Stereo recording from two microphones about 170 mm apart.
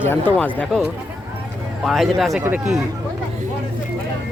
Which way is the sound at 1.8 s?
Centre (ahead or behind).